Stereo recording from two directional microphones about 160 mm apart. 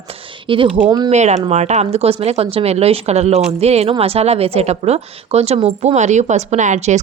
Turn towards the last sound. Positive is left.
turn(degrees=-45)  # may be behind; listen again after turning